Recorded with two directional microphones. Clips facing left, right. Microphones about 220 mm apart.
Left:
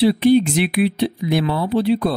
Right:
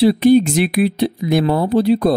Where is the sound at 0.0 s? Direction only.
45° right (ahead or behind).